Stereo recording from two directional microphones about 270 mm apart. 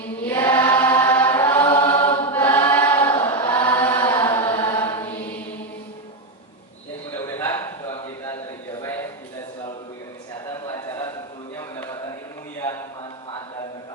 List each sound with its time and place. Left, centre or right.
0.3 s chant: centre
1.7 s choir: left
2.0 s choir: centre
3.0 s choir: centre
3.2 s chant: centre
4.0 s chant: centre
7.2 s a sound: centre
10.8 s a sound: centre